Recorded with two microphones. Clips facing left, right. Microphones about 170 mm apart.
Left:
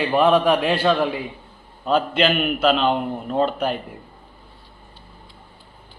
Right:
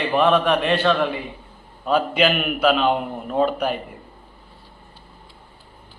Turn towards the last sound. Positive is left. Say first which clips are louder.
# even
turn(degrees=-5)  # may be behind; listen again after turning